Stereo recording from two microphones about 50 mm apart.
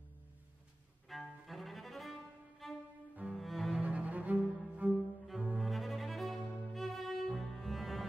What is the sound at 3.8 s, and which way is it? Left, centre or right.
Cello, right.